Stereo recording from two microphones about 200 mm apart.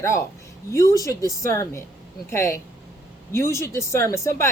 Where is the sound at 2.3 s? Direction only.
15° left (ahead or behind).